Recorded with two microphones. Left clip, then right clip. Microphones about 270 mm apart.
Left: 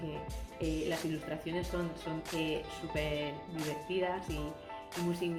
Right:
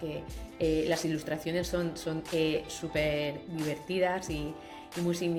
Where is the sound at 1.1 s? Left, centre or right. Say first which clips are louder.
Right 5 dB; right.